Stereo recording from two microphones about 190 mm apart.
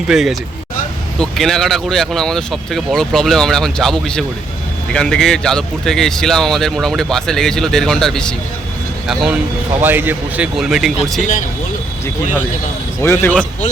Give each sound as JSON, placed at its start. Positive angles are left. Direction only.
{"t": 0.1, "sound": "speech", "side_deg": 0}
{"t": 9.8, "sound": "a man's voice", "side_deg": -10}
{"t": 11.2, "sound": "speech", "side_deg": 45}
{"t": 13.0, "sound": "speech", "side_deg": 10}